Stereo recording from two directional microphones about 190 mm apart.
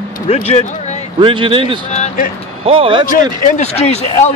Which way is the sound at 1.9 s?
35° left (ahead or behind).